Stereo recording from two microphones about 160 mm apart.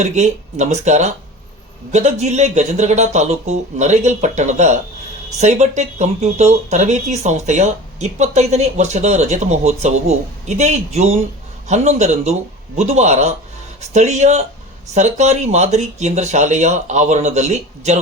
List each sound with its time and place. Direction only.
0.0 s speech: 45° right (ahead or behind)